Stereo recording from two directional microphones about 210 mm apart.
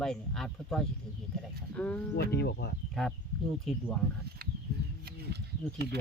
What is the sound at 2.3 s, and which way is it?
Speech, 50° left (ahead or behind).